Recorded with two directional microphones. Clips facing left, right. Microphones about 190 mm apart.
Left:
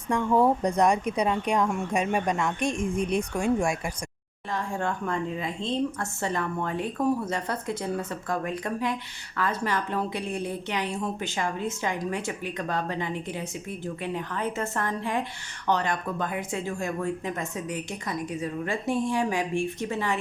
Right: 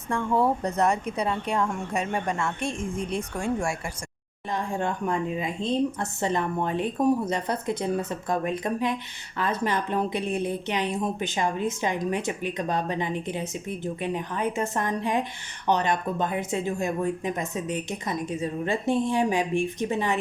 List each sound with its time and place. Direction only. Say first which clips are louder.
0.1 s speech: left 2 dB; 15° left (ahead or behind)
4.5 s a woman's voice: right 1 dB; 20° right (ahead or behind)